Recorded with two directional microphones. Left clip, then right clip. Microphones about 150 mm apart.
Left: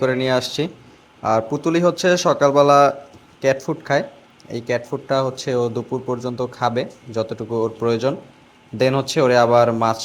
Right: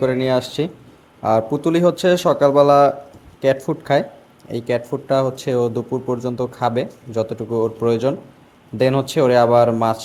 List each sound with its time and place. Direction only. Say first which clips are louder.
0.0 s speech: right 1 dB; 10° right (ahead or behind)